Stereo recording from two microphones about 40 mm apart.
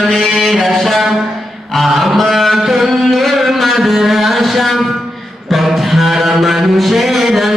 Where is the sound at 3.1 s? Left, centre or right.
Centre.